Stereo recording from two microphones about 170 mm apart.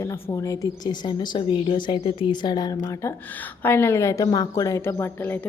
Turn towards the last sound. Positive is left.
turn(degrees=15)  # may be behind; listen again after turning